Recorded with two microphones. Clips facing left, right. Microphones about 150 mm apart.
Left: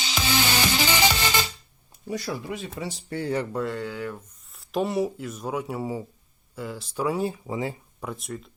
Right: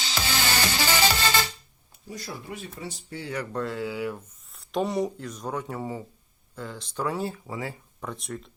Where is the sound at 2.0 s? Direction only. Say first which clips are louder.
Left 7 dB; 85° left.